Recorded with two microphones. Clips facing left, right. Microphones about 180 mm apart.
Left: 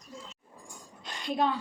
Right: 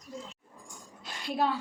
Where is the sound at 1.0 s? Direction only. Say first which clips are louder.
Left 1 dB; 5° right (ahead or behind).